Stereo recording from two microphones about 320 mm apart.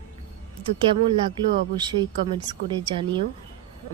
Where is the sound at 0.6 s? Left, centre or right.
Centre.